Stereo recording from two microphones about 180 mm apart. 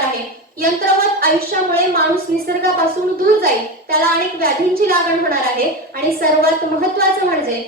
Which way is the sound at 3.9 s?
55° right (ahead or behind).